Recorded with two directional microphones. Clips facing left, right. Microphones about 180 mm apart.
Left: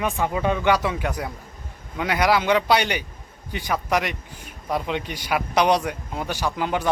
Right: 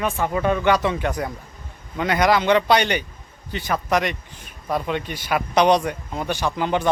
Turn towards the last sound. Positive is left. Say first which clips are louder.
# right 2 dB
turn(degrees=5)  # may be behind; listen again after turning